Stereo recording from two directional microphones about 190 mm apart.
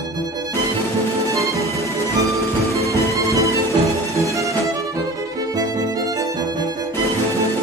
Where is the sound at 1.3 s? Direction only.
15° right (ahead or behind).